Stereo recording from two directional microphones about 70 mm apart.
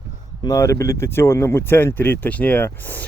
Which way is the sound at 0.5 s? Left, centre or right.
Left.